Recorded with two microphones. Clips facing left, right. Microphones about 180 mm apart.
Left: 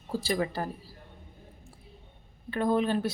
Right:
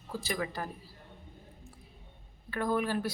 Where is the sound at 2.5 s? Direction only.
25° left (ahead or behind).